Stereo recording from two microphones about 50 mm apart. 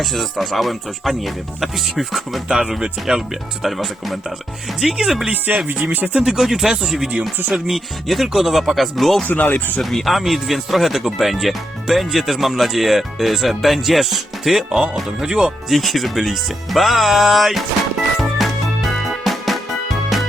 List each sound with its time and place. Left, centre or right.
0.0 s speech: centre
3.7 s speech: centre
5.3 s music: right
6.1 s speech: centre
6.4 s speech: centre
7.1 s speech: right
7.5 s speech: centre
9.2 s speech: left
9.9 s speech: centre
15.7 s speech: centre
18.2 s music: centre